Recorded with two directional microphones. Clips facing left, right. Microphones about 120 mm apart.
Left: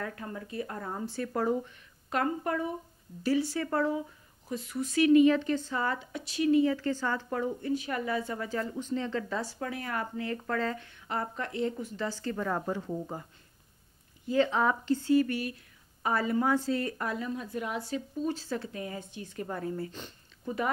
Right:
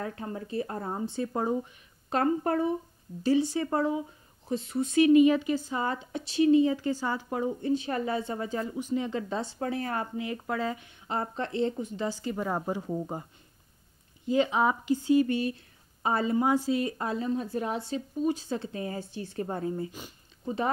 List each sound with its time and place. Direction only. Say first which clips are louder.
0.0 s speech: right 3 dB; 25° right (ahead or behind)
3.3 s speech: right 3 dB; 20° right (ahead or behind)
10.1 s speech: right 1 dB; 15° right (ahead or behind)
14.2 s speech: right 1 dB; 20° right (ahead or behind)